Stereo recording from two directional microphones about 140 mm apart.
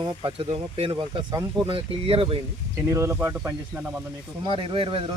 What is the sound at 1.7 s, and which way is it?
Speech, 40° right (ahead or behind).